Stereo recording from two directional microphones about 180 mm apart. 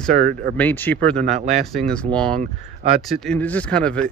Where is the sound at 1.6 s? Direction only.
Centre (ahead or behind).